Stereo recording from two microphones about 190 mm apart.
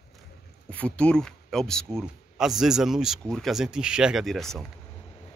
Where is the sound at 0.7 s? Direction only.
5° left (ahead or behind).